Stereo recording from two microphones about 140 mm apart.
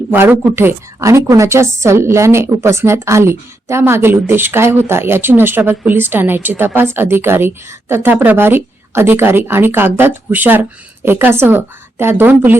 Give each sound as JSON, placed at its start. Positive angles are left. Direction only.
{"t": 0.1, "sound": "a woman's voice", "side_deg": -10}